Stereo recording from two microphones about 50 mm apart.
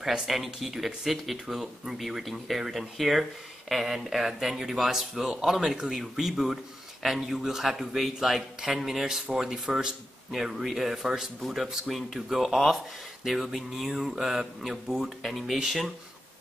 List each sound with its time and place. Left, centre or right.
0.3 s speech: centre